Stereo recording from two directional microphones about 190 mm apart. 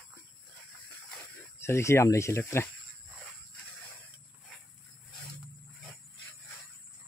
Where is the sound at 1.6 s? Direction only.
15° left (ahead or behind).